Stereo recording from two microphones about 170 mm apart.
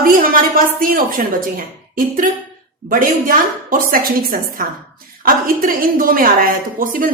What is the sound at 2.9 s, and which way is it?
A woman's voice, 50° right (ahead or behind).